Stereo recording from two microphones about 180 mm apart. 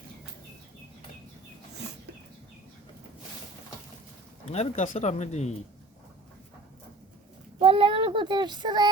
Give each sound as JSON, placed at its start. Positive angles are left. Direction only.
{"t": 4.4, "sound": "speech", "side_deg": 40}
{"t": 7.6, "sound": "child singing", "side_deg": -30}